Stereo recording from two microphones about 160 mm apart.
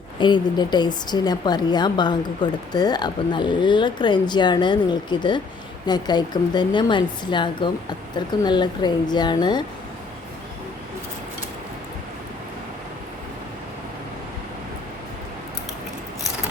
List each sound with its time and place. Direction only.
0.2 s a woman's voice: 30° left (ahead or behind)